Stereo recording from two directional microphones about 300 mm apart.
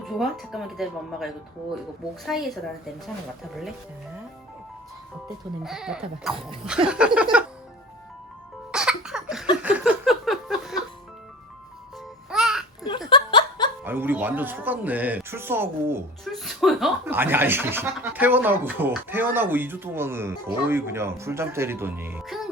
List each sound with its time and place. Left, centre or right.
0.0 s speech: centre
5.6 s speech: centre
8.7 s a sound: centre
12.3 s babbling: centre
13.1 s laughter: centre
13.8 s speech: centre